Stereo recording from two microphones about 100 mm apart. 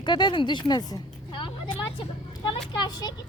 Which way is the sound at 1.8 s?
55° left (ahead or behind).